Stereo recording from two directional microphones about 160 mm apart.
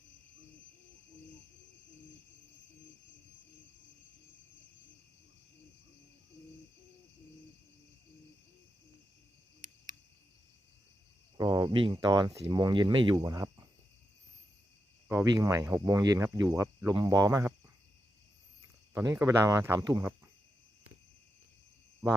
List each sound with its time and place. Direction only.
11.3 s speech: 25° right (ahead or behind)
15.1 s speech: 20° right (ahead or behind)
18.9 s speech: 15° right (ahead or behind)